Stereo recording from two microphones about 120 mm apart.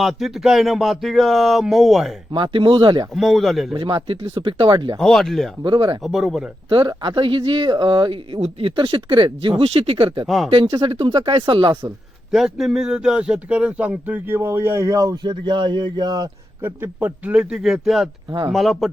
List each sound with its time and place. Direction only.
0.0 s speech: centre (ahead or behind)
2.3 s speech: 45° right (ahead or behind)
3.2 s speech: centre (ahead or behind)
3.8 s speech: 45° right (ahead or behind)
4.9 s speech: 5° left (ahead or behind)
5.6 s speech: 40° right (ahead or behind)
6.0 s speech: centre (ahead or behind)
6.7 s speech: 40° right (ahead or behind)
10.2 s speech: centre (ahead or behind)
10.5 s speech: 45° right (ahead or behind)
12.3 s a man's voice: centre (ahead or behind); by 16.3 s 35° right (ahead or behind)
16.6 s speech: 15° right (ahead or behind); by 18.9 s centre (ahead or behind)